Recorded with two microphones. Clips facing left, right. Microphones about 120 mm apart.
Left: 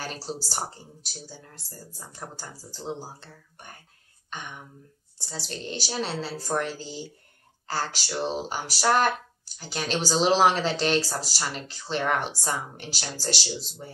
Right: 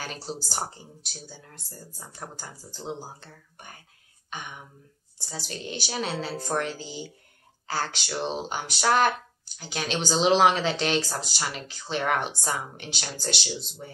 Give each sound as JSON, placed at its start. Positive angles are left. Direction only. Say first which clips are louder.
{"t": 0.0, "sound": "speech", "louder": "left 1 dB", "side_deg": 0}
{"t": 1.6, "sound": "speech", "louder": "even", "side_deg": 30}
{"t": 2.0, "sound": "speech", "louder": "even", "side_deg": 0}
{"t": 5.5, "sound": "speech", "louder": "left 1 dB", "side_deg": -5}